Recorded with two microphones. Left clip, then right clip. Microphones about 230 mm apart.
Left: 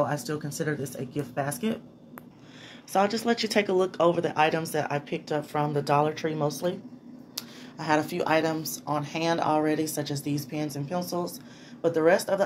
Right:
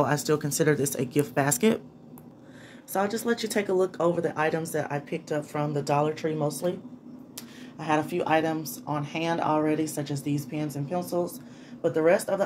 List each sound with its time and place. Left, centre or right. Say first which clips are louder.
0.0 s speech: right 4 dB; right
2.9 s speech: left 2 dB; centre